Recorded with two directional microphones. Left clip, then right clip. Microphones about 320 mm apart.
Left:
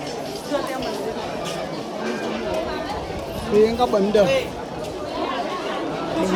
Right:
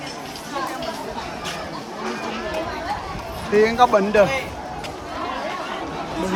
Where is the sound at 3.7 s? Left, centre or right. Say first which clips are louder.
Right 3 dB; centre.